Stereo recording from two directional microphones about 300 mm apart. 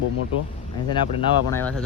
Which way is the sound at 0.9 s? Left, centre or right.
Centre.